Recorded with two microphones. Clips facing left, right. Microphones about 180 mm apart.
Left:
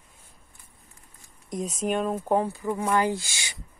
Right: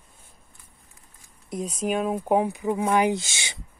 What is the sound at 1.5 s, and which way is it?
Speech, centre (ahead or behind).